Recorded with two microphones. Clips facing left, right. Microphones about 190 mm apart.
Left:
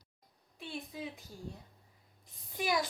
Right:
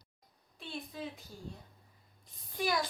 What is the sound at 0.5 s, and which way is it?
Speech, 10° left (ahead or behind).